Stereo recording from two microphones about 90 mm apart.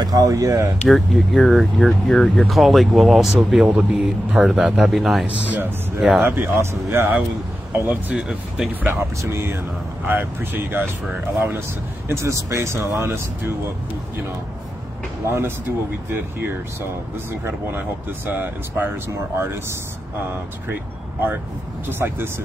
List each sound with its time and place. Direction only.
0.0 s speech: 45° right (ahead or behind)
0.8 s speech: centre (ahead or behind)
3.6 s speech: 15° right (ahead or behind)
5.2 s speech: 20° right (ahead or behind)
5.9 s speech: centre (ahead or behind)
6.2 s speech: 25° right (ahead or behind)
7.7 s speech: 20° right (ahead or behind)
8.2 s speech: 5° right (ahead or behind)
9.2 s speech: 30° right (ahead or behind)
15.2 s speech: 25° right (ahead or behind)
17.3 s speech: 25° right (ahead or behind)
21.8 s speech: 25° right (ahead or behind)